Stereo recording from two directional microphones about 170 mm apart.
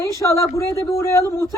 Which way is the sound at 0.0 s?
15° left (ahead or behind).